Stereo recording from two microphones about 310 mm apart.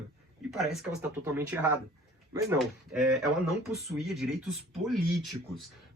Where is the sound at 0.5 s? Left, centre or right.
Centre.